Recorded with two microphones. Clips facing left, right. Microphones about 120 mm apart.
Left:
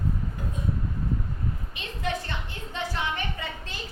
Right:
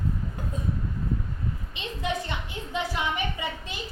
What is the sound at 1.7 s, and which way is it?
A woman's voice, 20° right (ahead or behind).